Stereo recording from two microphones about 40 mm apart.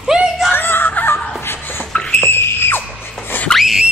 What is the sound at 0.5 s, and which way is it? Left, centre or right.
Giggle, left.